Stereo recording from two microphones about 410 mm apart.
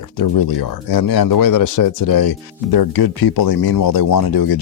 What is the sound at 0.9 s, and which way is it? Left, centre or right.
Speech, left.